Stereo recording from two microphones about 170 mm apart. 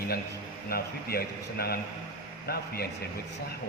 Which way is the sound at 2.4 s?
65° left (ahead or behind).